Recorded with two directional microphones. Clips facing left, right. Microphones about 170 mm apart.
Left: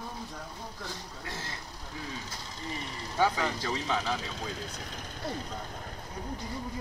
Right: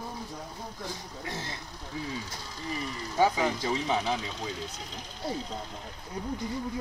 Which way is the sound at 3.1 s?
15° right (ahead or behind).